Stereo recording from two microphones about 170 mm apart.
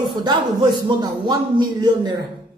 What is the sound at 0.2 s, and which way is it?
A man's voice, 25° right (ahead or behind).